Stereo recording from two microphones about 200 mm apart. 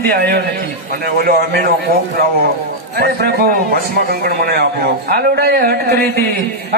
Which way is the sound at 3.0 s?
50° right (ahead or behind).